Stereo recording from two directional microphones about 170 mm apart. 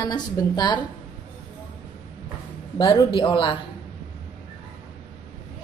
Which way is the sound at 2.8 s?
25° left (ahead or behind).